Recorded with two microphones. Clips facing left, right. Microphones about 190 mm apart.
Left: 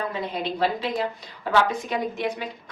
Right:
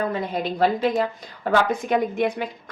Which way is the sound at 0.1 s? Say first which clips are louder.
Right 3 dB; 45° right (ahead or behind).